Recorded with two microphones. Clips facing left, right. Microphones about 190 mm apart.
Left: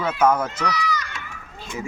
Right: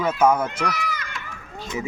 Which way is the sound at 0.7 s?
55° right (ahead or behind).